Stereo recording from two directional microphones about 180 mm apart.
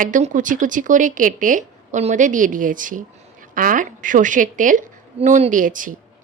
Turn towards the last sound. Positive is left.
turn(degrees=-50)  # may be behind; listen again after turning